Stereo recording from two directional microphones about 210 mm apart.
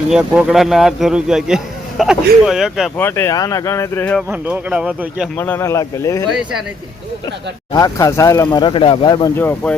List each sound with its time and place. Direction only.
0.1 s speech: 5° right (ahead or behind)
3.0 s speech: 10° left (ahead or behind)
4.3 s speech: 10° right (ahead or behind)
5.4 s speech: 10° left (ahead or behind)
7.7 s speech: 15° left (ahead or behind)